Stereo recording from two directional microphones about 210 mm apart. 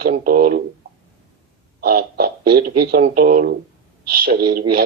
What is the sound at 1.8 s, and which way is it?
Speech, 45° right (ahead or behind).